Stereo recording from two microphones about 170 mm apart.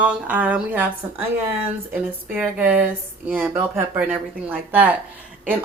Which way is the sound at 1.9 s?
10° right (ahead or behind).